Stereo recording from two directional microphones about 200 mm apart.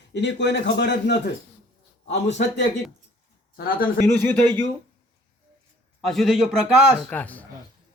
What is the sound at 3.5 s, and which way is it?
Speech, 45° left (ahead or behind).